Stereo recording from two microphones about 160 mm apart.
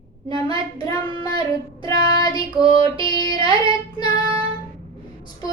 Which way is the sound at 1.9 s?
25° left (ahead or behind).